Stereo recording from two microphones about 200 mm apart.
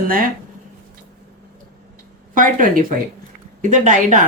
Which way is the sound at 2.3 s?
40° right (ahead or behind).